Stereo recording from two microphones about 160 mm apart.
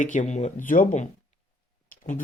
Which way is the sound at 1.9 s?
60° left (ahead or behind).